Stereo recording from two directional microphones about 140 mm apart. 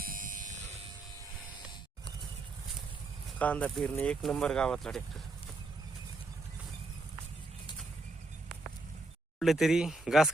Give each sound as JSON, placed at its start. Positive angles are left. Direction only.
{"t": 0.0, "sound": "a sound", "side_deg": -80}
{"t": 3.3, "sound": "speech", "side_deg": 10}
{"t": 9.4, "sound": "speech", "side_deg": 0}